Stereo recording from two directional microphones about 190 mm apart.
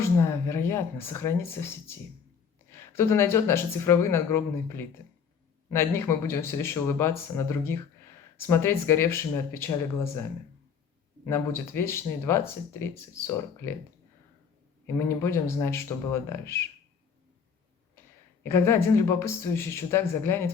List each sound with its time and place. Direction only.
0.0 s speech: 15° left (ahead or behind)
11.3 s speech: 15° left (ahead or behind)
14.8 s speech: 10° left (ahead or behind)
18.5 s speech: 15° left (ahead or behind)